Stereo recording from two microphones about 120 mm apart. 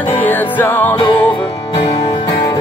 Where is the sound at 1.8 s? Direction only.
40° left (ahead or behind).